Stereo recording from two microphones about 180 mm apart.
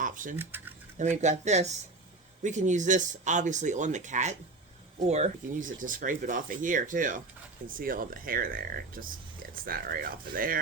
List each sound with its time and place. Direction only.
0.0 s a sound: 45° right (ahead or behind)
0.3 s speech: 10° right (ahead or behind)
0.9 s speech: 40° right (ahead or behind)